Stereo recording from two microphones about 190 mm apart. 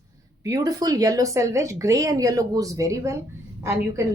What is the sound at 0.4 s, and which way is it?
A woman's voice, 20° right (ahead or behind).